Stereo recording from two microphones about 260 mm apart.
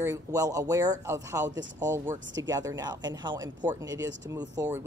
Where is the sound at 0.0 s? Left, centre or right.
Centre.